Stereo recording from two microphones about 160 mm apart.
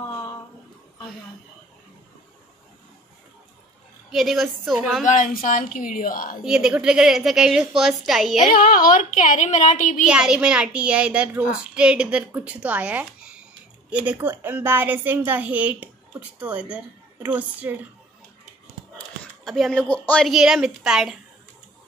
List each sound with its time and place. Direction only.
4.1 s a woman's voice: centre (ahead or behind)
5.0 s speech: 50° left (ahead or behind)
6.4 s a woman's voice: 5° right (ahead or behind)
8.4 s a woman's voice: 60° left (ahead or behind)
10.0 s a woman's voice: 5° right (ahead or behind)
18.9 s a woman's voice: centre (ahead or behind)